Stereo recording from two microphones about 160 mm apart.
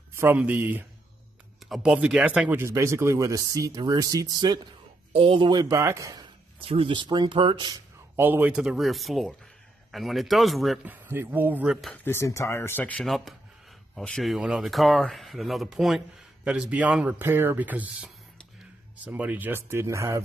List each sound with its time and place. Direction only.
0.1 s speech: 15° right (ahead or behind)
6.6 s speech: 35° right (ahead or behind)
8.2 s speech: 10° right (ahead or behind)
10.9 s speech: 15° right (ahead or behind)
12.0 s speech: 15° left (ahead or behind); by 20.2 s 20° right (ahead or behind)